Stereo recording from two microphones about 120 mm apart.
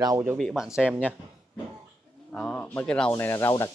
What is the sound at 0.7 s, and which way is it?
Speech, 10° right (ahead or behind).